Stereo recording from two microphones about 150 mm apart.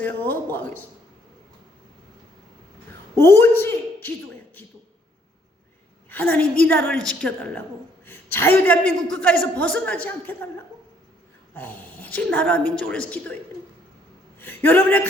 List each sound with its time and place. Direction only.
0.0 s a man's voice: 10° left (ahead or behind)
3.2 s a woman's voice: 15° left (ahead or behind)
6.1 s a man's voice: 10° left (ahead or behind)
11.5 s a man's voice: 10° left (ahead or behind)